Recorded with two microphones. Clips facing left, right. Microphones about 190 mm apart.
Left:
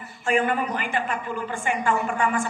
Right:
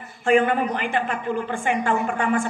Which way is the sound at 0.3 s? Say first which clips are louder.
Right 4 dB; 50° right (ahead or behind).